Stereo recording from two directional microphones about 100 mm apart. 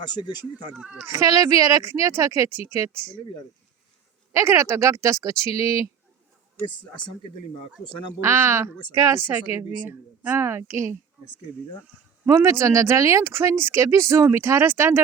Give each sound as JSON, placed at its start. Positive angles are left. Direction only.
{"t": 0.0, "sound": "speech", "side_deg": 45}
{"t": 1.0, "sound": "speech", "side_deg": -35}
{"t": 4.3, "sound": "speech", "side_deg": -30}
{"t": 7.5, "sound": "speech", "side_deg": 55}
{"t": 8.2, "sound": "speech", "side_deg": -25}
{"t": 12.3, "sound": "speech", "side_deg": -30}